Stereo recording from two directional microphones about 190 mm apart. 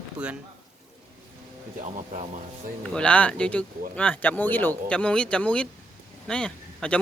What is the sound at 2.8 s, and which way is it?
Speech, 5° left (ahead or behind).